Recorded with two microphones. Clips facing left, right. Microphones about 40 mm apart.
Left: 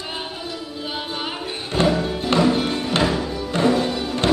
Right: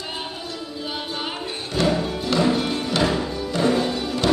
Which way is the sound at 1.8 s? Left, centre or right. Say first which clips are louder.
Left 2 dB; left.